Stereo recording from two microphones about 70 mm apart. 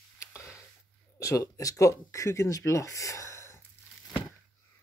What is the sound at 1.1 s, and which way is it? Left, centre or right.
Speech, left.